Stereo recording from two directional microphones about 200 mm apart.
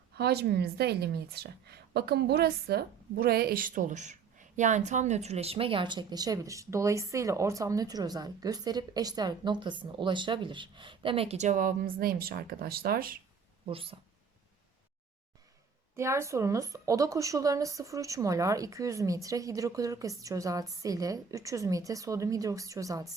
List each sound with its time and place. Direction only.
0.2 s a woman's voice: 55° right (ahead or behind)
13.7 s speech: 25° right (ahead or behind)
16.0 s speech: 15° right (ahead or behind)